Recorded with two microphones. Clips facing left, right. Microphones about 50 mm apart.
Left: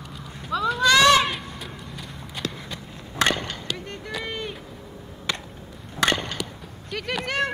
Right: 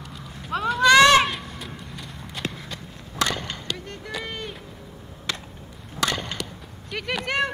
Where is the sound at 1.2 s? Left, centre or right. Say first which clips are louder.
Even; centre.